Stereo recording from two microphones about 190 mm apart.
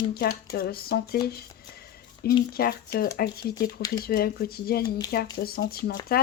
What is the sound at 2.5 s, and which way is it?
Speech, 55° left (ahead or behind).